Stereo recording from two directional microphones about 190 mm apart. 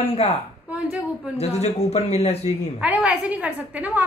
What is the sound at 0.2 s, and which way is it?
Speech, 30° left (ahead or behind).